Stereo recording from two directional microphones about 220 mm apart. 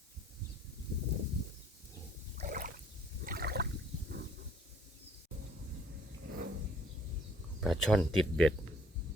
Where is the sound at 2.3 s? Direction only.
35° right (ahead or behind).